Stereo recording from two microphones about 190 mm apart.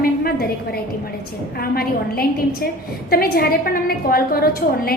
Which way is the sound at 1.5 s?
55° left (ahead or behind).